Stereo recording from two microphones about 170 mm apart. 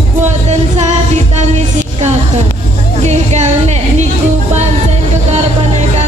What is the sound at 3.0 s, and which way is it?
Music, 40° right (ahead or behind).